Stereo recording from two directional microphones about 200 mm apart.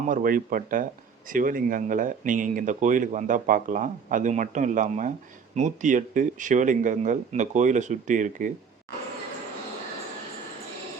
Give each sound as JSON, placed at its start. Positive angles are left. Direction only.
{"t": 0.0, "sound": "speech", "side_deg": -40}